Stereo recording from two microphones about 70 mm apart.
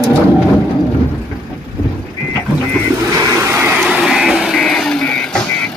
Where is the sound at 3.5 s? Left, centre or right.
Right.